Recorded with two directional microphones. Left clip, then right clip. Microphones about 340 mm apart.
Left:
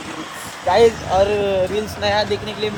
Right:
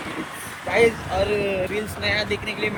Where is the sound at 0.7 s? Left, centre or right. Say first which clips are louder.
Left 5 dB; centre.